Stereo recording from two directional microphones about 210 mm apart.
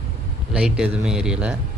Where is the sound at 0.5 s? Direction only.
5° right (ahead or behind).